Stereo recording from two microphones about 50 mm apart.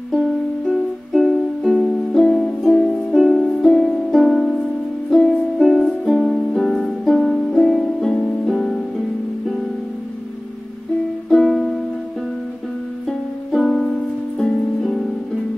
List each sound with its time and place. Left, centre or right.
0.7 s music: centre
2.2 s music: left
2.6 s music: centre
3.2 s music: centre
3.6 s music: centre
5.6 s music: centre
6.5 s music: centre
8.5 s harp: centre
11.2 s music: centre
13.6 s music: centre